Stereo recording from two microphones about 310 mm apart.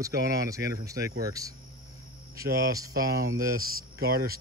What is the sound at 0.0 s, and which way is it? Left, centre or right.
Speech, centre.